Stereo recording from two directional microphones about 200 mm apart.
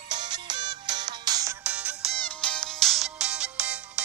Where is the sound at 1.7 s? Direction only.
5° right (ahead or behind).